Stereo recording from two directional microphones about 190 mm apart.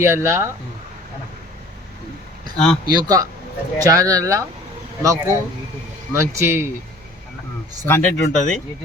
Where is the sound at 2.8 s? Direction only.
20° right (ahead or behind).